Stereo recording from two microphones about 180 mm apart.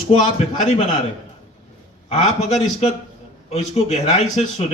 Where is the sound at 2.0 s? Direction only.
40° left (ahead or behind).